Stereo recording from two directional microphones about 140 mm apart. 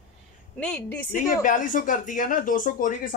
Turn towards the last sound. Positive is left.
turn(degrees=75)  # may be behind; listen again after turning